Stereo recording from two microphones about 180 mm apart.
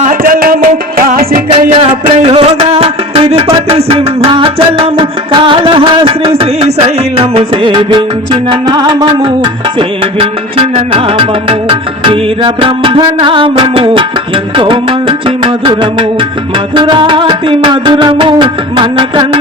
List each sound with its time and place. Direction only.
0.0 s music: 50° right (ahead or behind)
1.8 s a sound: 40° right (ahead or behind)
2.2 s music: 35° right (ahead or behind)